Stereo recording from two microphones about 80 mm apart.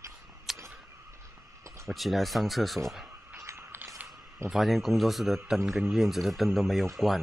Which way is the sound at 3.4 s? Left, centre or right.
Right.